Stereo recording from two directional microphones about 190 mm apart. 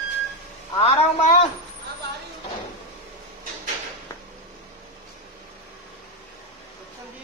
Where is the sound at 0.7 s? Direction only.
40° left (ahead or behind).